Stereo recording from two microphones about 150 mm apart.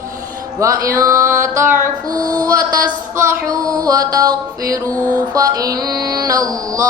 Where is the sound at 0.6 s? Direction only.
20° right (ahead or behind).